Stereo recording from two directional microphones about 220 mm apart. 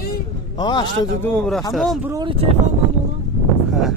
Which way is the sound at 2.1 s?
20° right (ahead or behind).